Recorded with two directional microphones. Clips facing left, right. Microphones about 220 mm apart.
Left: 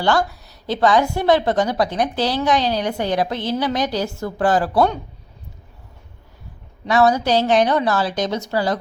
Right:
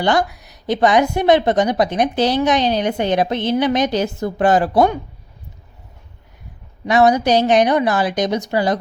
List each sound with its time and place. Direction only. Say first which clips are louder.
0.0 s a woman's voice: right 2 dB; 20° right (ahead or behind)
6.8 s a woman's voice: right 2 dB; 20° right (ahead or behind)